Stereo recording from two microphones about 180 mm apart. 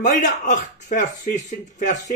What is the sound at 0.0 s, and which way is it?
Speech, 45° left (ahead or behind).